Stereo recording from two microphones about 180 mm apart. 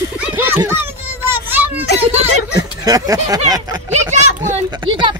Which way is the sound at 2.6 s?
20° right (ahead or behind).